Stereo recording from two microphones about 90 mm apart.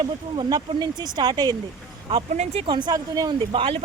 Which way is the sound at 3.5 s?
80° right.